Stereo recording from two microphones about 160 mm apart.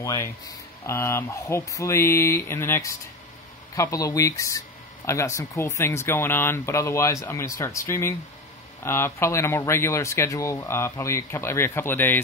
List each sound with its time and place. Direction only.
0.0 s speech: 20° left (ahead or behind)